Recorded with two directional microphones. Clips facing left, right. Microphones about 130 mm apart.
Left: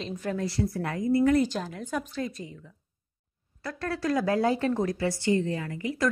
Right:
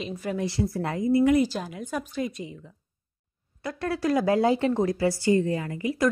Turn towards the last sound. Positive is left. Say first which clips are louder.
# right 3 dB
turn(degrees=-20)  # may be behind; listen again after turning